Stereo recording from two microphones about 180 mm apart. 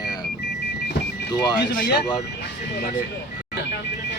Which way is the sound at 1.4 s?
25° left (ahead or behind).